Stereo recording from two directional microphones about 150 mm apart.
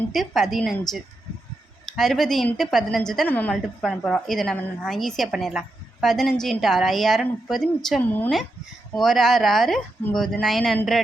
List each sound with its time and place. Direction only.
0.1 s a woman's voice: centre (ahead or behind)
2.0 s a woman's voice: centre (ahead or behind)